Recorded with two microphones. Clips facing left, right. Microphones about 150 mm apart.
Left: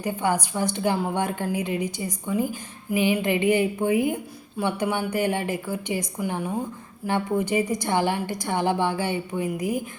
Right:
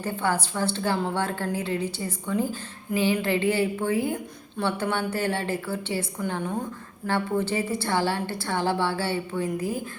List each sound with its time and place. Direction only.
0.0 s a woman's voice: 15° left (ahead or behind)